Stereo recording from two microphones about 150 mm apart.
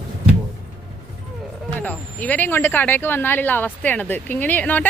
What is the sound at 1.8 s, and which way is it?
Speech, 10° left (ahead or behind).